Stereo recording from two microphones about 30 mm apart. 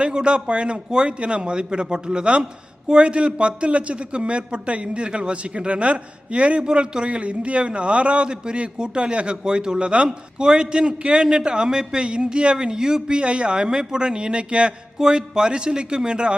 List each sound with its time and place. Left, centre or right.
0.0 s a man's voice: right
10.1 s a man's voice: right
13.1 s a man's voice: right
14.9 s a man's voice: right